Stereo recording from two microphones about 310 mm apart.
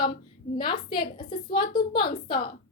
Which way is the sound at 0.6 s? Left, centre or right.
Centre.